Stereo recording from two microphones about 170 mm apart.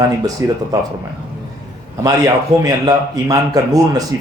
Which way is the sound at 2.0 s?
20° right (ahead or behind).